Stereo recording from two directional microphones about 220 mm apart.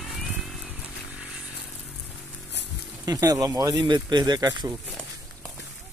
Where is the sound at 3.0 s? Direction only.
15° right (ahead or behind).